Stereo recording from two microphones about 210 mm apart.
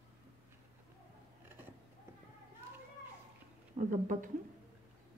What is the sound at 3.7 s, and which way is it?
Speech, 40° right (ahead or behind).